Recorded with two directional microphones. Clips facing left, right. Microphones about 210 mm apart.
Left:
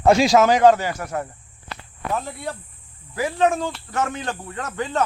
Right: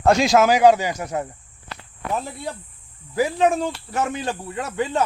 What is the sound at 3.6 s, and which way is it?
Speech, 10° right (ahead or behind).